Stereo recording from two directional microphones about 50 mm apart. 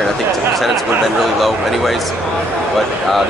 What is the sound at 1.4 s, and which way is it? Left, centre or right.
Speech, centre.